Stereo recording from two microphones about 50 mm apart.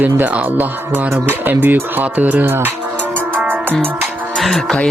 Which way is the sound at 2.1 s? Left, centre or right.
Right.